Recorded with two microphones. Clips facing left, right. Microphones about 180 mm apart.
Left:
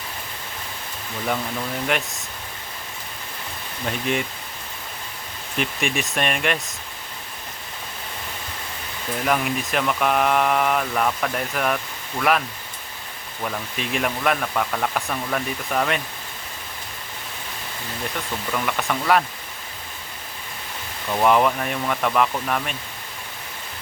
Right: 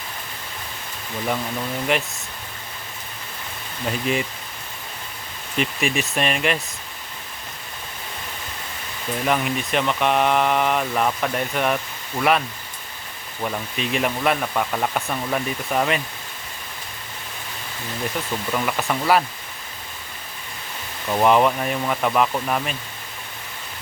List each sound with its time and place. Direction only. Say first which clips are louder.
3.8 s speech: right 1 dB; centre (ahead or behind)
5.5 s speech: right 2 dB; centre (ahead or behind)
9.2 s speech: even; centre (ahead or behind)
13.4 s speech: right 2 dB; 5° right (ahead or behind)
18.5 s speech: right 1 dB; 5° right (ahead or behind)
21.1 s speech: right 1 dB; 5° right (ahead or behind)